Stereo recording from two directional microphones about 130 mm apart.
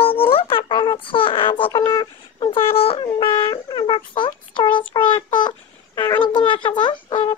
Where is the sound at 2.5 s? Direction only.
45° left (ahead or behind).